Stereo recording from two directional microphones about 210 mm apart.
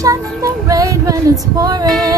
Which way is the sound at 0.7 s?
15° right (ahead or behind).